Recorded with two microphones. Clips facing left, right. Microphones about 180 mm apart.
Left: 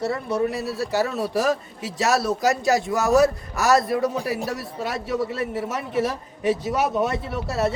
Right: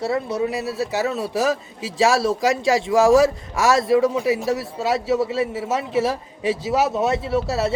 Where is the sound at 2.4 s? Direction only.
90° right.